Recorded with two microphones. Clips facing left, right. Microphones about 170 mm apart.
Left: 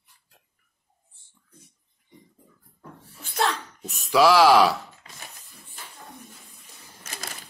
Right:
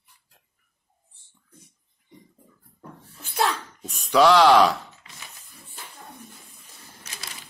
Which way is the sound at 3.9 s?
5° left (ahead or behind).